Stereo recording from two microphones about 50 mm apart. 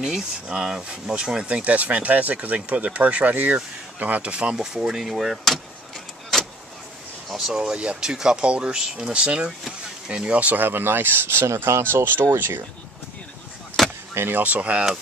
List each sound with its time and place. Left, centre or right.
0.5 s speech: centre
1.5 s speech: right; by 5.6 s centre
7.2 s speech: centre
7.5 s speech: centre
10.4 s speech: right
11.8 s speech: right
13.8 s vehicle: centre
14.1 s speech: right
14.4 s speech: right